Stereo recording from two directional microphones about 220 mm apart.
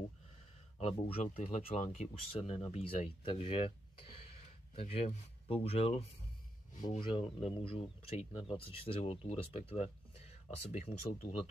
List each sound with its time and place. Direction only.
0.7 s speech: 25° left (ahead or behind)